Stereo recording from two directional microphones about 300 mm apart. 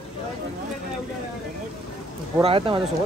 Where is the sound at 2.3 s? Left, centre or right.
Centre.